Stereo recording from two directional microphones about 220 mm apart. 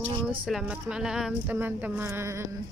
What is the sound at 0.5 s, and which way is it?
Speech, 5° right (ahead or behind).